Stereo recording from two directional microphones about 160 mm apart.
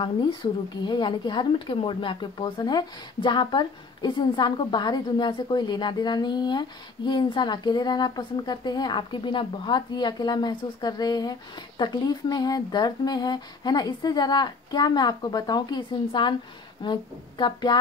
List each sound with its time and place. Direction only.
0.0 s a woman's voice: 30° left (ahead or behind)